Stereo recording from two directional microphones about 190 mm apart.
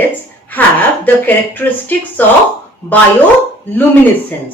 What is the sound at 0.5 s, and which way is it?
A woman's voice, 10° left (ahead or behind).